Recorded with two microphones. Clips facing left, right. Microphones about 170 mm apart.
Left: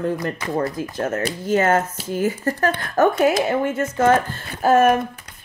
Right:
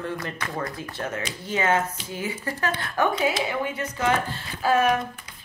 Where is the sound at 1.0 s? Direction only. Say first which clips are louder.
Left 8 dB; 45° left (ahead or behind).